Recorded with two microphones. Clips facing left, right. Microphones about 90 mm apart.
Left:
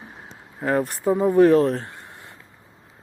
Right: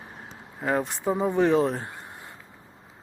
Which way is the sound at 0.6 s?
Centre (ahead or behind).